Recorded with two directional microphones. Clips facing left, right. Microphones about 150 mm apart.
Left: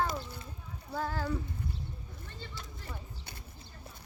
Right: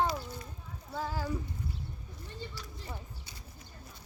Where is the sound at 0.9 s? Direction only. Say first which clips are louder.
Left 1 dB; 10° right (ahead or behind).